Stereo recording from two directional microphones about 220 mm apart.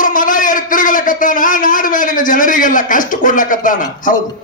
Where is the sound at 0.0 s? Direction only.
35° left (ahead or behind).